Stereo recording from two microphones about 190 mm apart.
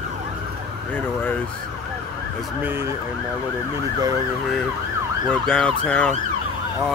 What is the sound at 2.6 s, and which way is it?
Emergency vehicle, 10° right (ahead or behind).